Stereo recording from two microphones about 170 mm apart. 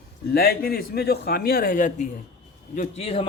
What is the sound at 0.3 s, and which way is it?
A man's voice, 60° left (ahead or behind).